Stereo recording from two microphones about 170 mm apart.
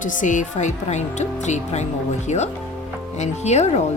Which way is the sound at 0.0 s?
50° left (ahead or behind).